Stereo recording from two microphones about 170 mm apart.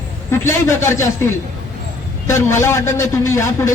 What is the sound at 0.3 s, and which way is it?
A man's voice, 15° left (ahead or behind).